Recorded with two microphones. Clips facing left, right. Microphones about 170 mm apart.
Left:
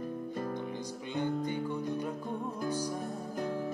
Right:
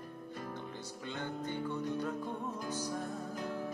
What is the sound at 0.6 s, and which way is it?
Music, 15° left (ahead or behind).